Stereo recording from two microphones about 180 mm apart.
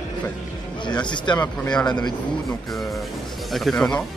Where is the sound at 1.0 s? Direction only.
25° left (ahead or behind).